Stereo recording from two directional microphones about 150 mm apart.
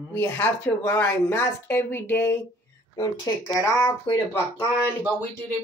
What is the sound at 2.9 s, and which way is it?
Speech, 25° left (ahead or behind).